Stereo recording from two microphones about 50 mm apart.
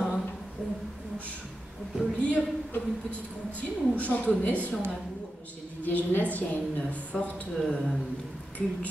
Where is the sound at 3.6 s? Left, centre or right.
Left.